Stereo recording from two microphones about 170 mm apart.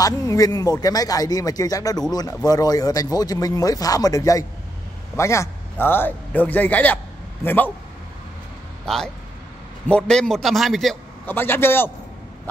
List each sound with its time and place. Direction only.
0.0 s a man's voice: 20° left (ahead or behind)
8.8 s a man's voice: centre (ahead or behind)
11.2 s a man's voice: 10° left (ahead or behind)